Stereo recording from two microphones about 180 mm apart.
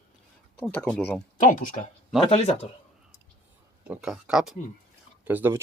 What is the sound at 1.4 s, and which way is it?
Speech, 45° left (ahead or behind).